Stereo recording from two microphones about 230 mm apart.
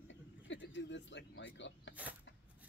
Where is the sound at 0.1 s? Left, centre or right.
Left.